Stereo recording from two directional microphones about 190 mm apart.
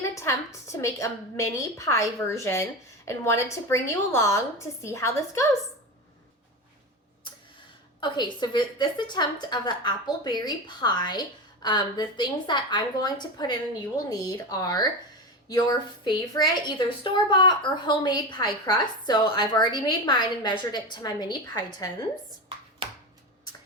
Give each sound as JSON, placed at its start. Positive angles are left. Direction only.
{"t": 0.2, "sound": "a woman's voice", "side_deg": 15}
{"t": 8.0, "sound": "a woman's voice", "side_deg": 25}
{"t": 16.0, "sound": "a woman's voice", "side_deg": 20}
{"t": 22.8, "sound": "a sound", "side_deg": -25}